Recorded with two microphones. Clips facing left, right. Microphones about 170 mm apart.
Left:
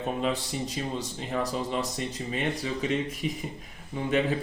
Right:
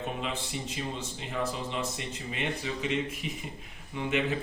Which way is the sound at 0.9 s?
40° left (ahead or behind).